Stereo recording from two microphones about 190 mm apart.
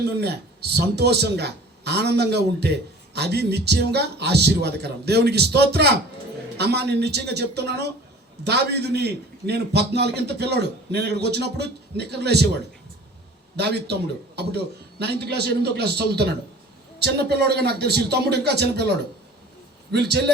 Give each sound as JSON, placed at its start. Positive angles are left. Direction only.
{"t": 0.0, "sound": "a man's voice", "side_deg": -60}
{"t": 13.6, "sound": "a man's voice", "side_deg": -60}